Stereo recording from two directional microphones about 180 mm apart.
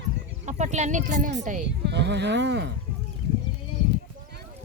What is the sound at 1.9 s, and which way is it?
Speech, 75° right (ahead or behind).